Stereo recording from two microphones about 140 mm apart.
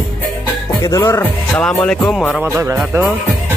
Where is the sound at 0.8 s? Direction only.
25° left (ahead or behind).